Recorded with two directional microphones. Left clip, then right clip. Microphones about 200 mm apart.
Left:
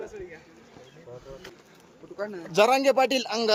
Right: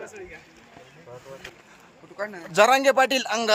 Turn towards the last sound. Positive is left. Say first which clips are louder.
# right 2 dB
turn(degrees=-10)  # may be behind; listen again after turning